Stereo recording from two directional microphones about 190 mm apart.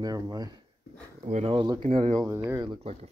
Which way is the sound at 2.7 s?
30° right (ahead or behind).